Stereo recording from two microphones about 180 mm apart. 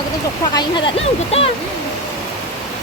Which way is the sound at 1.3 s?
35° left (ahead or behind).